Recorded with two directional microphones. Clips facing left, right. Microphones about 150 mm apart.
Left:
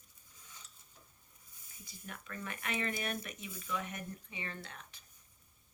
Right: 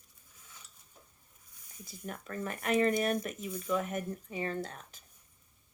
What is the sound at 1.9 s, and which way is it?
Speech, 40° right (ahead or behind).